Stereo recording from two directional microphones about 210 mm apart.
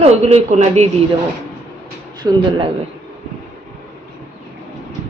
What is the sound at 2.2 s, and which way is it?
Speech, 20° right (ahead or behind).